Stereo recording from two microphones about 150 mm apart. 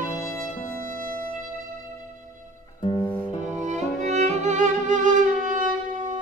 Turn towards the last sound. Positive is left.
turn(degrees=-60)  # may be behind; listen again after turning